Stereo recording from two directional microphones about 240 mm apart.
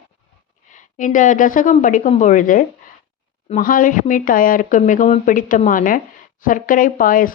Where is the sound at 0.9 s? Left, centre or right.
Left.